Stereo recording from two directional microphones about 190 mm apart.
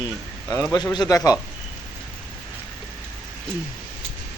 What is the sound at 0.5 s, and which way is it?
Speech, 15° left (ahead or behind).